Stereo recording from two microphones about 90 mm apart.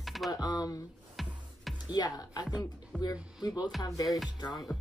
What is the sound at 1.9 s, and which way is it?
Speech, 45° left (ahead or behind).